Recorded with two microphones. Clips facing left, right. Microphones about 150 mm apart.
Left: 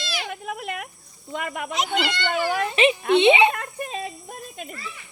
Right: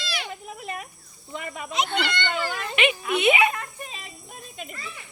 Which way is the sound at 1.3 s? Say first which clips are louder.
Left 5 dB; 70° left (ahead or behind).